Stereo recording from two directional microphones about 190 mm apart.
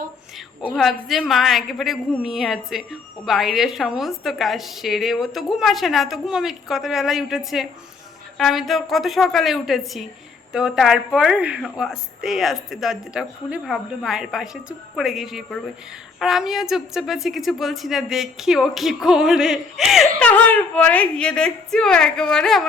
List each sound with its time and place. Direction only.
0.7 s a woman's voice: centre (ahead or behind)